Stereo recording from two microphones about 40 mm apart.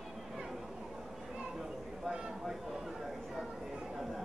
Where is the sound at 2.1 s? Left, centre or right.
Centre.